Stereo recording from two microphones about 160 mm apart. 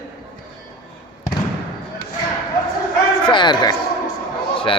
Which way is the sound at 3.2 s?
30° left (ahead or behind).